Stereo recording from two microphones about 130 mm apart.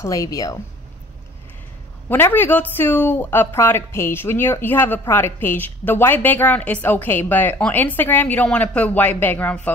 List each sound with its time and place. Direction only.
0.0 s speech: 25° left (ahead or behind)
2.0 s a woman's voice: 15° left (ahead or behind)